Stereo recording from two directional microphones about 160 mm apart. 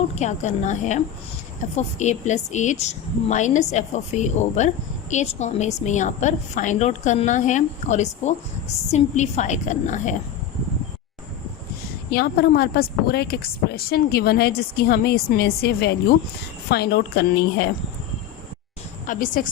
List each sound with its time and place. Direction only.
0.2 s a woman's voice: 45° left (ahead or behind)
12.1 s a woman's voice: 75° left (ahead or behind)
19.0 s a woman's voice: 55° left (ahead or behind)